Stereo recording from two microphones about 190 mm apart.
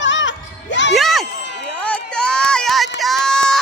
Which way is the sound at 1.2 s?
65° left (ahead or behind).